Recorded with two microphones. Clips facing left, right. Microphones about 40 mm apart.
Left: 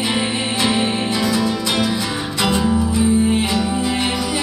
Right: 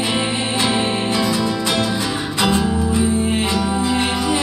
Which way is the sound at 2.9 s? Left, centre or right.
Right.